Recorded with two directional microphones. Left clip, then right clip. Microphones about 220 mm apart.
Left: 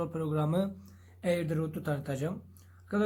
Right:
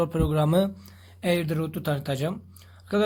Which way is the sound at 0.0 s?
45° right (ahead or behind).